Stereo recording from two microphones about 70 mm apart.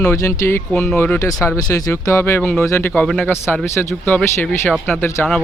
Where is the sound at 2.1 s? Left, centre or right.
Left.